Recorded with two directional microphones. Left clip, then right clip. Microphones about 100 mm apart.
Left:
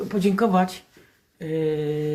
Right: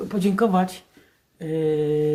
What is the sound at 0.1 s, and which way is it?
Speech, 40° right (ahead or behind).